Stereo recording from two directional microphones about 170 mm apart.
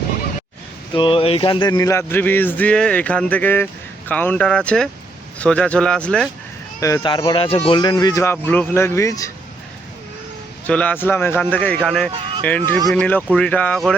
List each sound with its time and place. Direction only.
0.9 s speech: 30° left (ahead or behind); by 6.2 s 5° left (ahead or behind)
6.7 s speech: 20° left (ahead or behind)
10.7 s speech: 10° left (ahead or behind)